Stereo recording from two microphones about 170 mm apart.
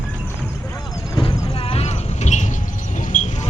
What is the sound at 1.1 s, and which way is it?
Vehicle, 30° left (ahead or behind).